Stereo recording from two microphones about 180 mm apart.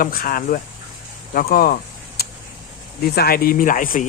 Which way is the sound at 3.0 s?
55° left (ahead or behind).